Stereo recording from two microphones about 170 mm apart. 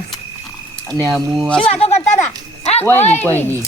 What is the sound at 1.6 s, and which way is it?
Speech, 35° left (ahead or behind).